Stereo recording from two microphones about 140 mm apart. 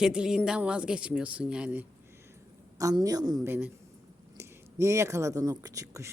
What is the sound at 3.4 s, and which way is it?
Speech, 15° right (ahead or behind).